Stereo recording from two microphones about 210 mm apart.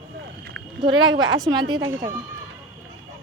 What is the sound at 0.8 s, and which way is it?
A woman's voice, 20° right (ahead or behind).